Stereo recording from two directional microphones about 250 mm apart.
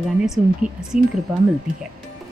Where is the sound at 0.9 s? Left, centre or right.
Right.